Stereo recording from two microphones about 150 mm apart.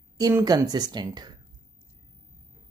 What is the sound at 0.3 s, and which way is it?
Speech, 20° right (ahead or behind).